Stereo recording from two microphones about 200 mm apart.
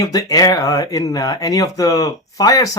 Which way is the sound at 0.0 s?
20° left (ahead or behind).